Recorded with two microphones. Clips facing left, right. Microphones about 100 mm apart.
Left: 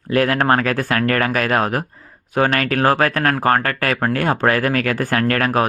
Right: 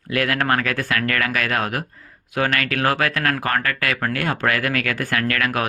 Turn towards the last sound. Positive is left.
turn(degrees=35)  # may be behind; listen again after turning